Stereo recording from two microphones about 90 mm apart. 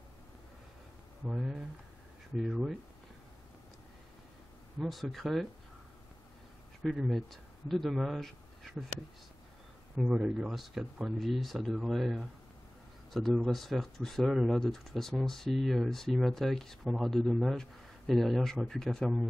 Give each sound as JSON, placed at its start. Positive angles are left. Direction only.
{"t": 1.2, "sound": "speech", "side_deg": -5}
{"t": 4.7, "sound": "speech", "side_deg": 0}
{"t": 7.0, "sound": "speech", "side_deg": 0}
{"t": 9.9, "sound": "speech", "side_deg": -5}
{"t": 13.1, "sound": "speech", "side_deg": 5}